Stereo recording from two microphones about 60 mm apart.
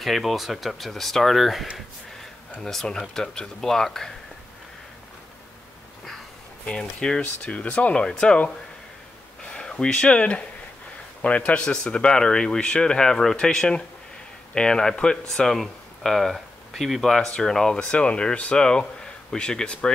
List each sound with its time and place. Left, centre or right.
0.0 s speech: centre
2.5 s speech: centre
6.6 s speech: centre
9.5 s speech: centre